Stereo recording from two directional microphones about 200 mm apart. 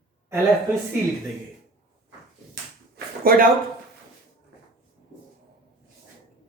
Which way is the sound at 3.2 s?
45° right (ahead or behind).